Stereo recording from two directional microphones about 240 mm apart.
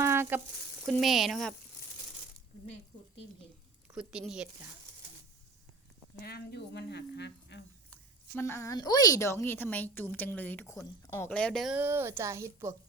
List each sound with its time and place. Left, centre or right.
0.0 s frying: centre
0.9 s speech: centre
3.9 s speech: centre
6.2 s speech: left
8.4 s a woman's voice: centre